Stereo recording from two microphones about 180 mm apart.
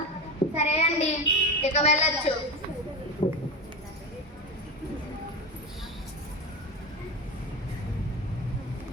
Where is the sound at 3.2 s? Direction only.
30° left (ahead or behind).